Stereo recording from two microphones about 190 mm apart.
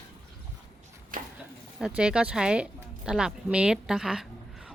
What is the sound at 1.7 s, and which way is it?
Speech, 5° right (ahead or behind).